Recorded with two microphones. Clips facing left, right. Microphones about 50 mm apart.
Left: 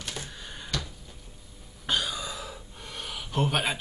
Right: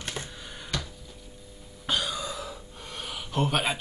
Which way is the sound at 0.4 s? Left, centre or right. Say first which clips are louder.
Even; centre.